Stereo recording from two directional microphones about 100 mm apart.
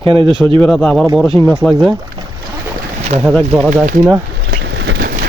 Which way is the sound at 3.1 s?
90° right.